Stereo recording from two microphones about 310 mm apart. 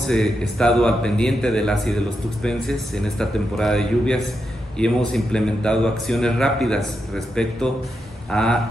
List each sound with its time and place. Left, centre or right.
0.0 s a man's voice: centre